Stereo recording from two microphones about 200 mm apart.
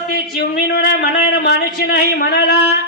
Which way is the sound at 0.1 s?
50° left (ahead or behind).